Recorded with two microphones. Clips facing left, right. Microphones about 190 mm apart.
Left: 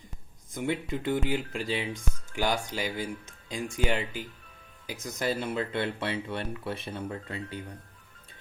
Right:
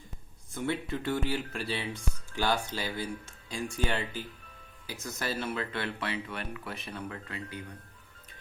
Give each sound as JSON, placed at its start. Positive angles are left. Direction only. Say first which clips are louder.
{"t": 0.5, "sound": "speech", "louder": "left 2 dB", "side_deg": 15}